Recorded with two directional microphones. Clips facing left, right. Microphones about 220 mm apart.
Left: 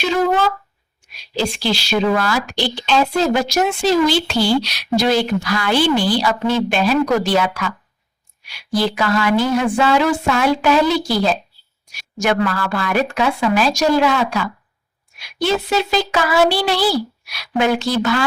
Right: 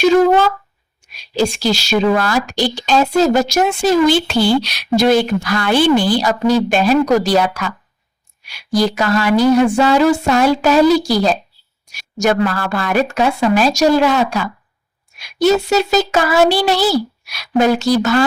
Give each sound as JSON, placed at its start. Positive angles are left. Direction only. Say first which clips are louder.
{"t": 1.4, "sound": "a woman's voice", "louder": "right 4 dB", "side_deg": -45}